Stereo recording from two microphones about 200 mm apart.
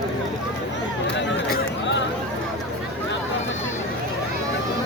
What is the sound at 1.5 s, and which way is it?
Chatter, 60° left (ahead or behind).